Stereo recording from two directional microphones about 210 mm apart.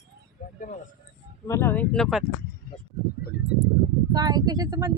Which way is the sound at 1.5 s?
10° left (ahead or behind).